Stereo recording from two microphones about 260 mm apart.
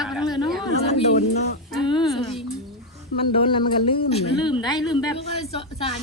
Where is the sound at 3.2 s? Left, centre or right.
Left.